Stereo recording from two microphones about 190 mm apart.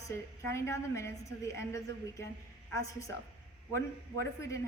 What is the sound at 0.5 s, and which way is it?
A woman's voice, 15° left (ahead or behind).